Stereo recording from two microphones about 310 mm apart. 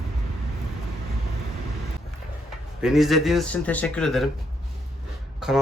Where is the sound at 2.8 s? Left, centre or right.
Centre.